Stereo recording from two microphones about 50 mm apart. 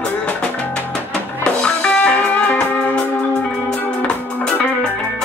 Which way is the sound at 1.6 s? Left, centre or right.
Left.